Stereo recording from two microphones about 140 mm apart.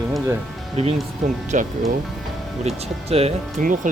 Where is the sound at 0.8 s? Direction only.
50° right (ahead or behind).